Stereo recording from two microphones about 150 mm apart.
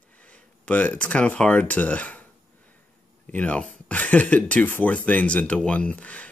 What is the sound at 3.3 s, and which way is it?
Speech, 10° left (ahead or behind).